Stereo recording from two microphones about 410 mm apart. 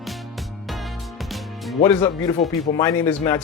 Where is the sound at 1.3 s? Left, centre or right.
Centre.